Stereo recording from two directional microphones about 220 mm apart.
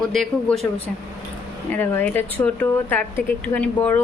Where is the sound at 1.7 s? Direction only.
10° left (ahead or behind).